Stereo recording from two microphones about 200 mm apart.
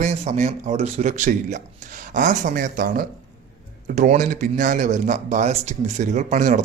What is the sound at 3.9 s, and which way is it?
Speech, 35° right (ahead or behind).